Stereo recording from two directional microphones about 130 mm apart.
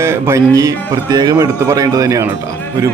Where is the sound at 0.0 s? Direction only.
20° right (ahead or behind).